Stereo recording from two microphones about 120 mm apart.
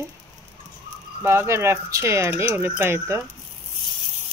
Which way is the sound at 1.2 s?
20° right (ahead or behind).